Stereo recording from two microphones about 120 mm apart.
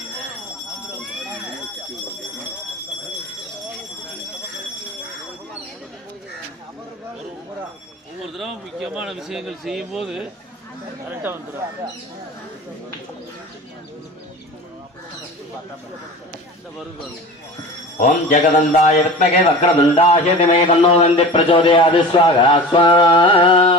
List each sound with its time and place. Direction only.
8.2 s speech: centre (ahead or behind)
11.1 s speech: 15° right (ahead or behind)
18.0 s speech: 90° left; by 23.7 s 50° left (ahead or behind)